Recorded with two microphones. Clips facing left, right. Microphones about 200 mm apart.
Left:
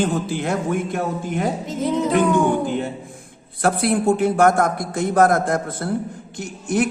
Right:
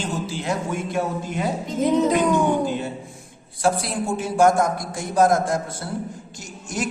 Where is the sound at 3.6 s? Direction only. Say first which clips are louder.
Left 5 dB; 60° left (ahead or behind).